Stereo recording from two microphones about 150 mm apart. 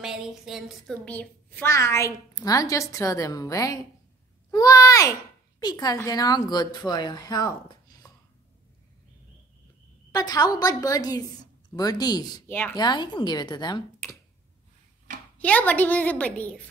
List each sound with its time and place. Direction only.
0.0 s a woman's voice: 5° right (ahead or behind); by 8.1 s 25° left (ahead or behind)
10.1 s a woman's voice: 25° left (ahead or behind)
12.4 s a woman's voice: 10° left (ahead or behind)
12.7 s a woman's voice: 30° left (ahead or behind)
15.3 s a woman's voice: 10° left (ahead or behind)